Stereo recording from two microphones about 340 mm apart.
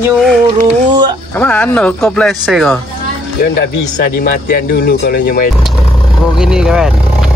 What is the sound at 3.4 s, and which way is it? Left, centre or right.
Speech, left.